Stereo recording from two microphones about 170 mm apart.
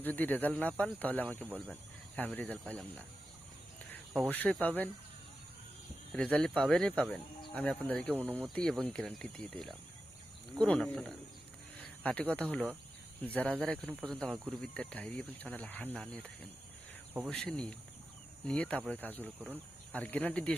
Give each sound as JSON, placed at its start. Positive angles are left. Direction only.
{"t": 0.0, "sound": "speech", "side_deg": 10}
{"t": 4.3, "sound": "speech", "side_deg": 10}
{"t": 6.1, "sound": "speech", "side_deg": 5}